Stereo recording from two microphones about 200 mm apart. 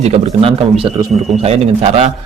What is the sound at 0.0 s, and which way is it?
A man's voice, 30° right (ahead or behind).